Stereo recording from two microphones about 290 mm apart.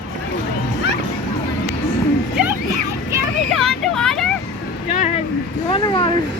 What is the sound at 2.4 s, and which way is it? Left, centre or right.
Music, centre.